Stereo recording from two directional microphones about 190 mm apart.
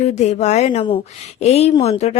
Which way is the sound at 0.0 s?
35° left (ahead or behind).